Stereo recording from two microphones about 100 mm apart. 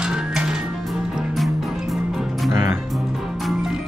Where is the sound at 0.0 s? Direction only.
10° right (ahead or behind).